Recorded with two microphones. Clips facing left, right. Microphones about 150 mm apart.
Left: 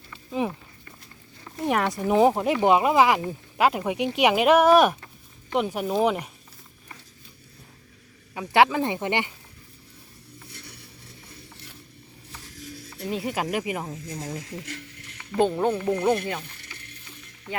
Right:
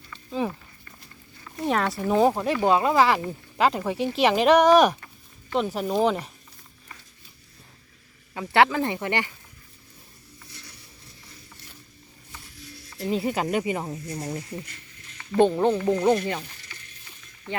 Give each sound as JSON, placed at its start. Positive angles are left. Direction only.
{"t": 0.1, "sound": "walk", "side_deg": 15}
{"t": 1.6, "sound": "speech", "side_deg": 15}
{"t": 8.3, "sound": "speech", "side_deg": 10}
{"t": 13.1, "sound": "speech", "side_deg": 0}
{"t": 14.6, "sound": "a sound", "side_deg": 80}
{"t": 15.3, "sound": "speech", "side_deg": 0}
{"t": 16.6, "sound": "stir", "side_deg": 60}